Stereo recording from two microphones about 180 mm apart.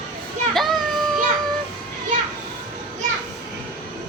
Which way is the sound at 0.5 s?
Centre (ahead or behind).